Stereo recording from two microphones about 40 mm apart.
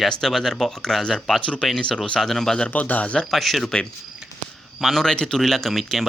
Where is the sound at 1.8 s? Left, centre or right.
Left.